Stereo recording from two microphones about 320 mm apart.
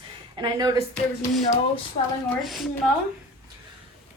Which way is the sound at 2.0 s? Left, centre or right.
Left.